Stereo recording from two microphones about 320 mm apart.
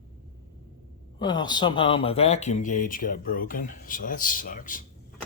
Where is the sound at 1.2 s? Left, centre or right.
Centre.